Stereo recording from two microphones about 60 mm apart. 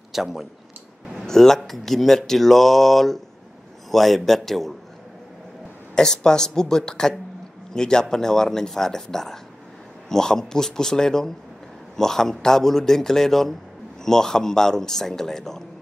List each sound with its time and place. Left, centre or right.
0.1 s speech: centre
1.2 s speech: centre
5.9 s speech: centre